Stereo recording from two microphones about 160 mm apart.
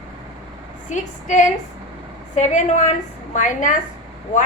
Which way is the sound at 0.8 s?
50° left (ahead or behind).